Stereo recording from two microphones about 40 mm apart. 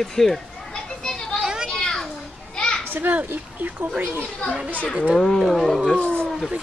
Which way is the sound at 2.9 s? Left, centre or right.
Right.